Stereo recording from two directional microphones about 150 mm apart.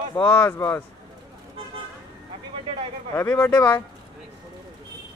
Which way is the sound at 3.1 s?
10° left (ahead or behind).